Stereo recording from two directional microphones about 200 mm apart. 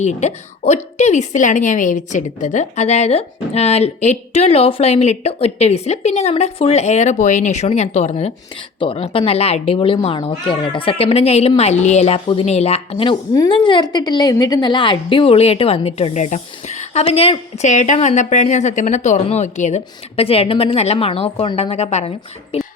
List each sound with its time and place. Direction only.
0.0 s a woman's voice: 35° left (ahead or behind)